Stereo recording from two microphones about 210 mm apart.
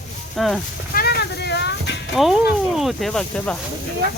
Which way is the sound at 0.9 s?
50° left (ahead or behind).